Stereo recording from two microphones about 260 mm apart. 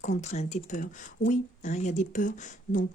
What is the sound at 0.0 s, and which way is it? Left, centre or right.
A woman's voice, left.